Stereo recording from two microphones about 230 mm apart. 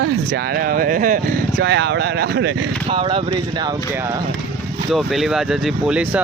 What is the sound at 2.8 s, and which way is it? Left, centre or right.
Speech, right.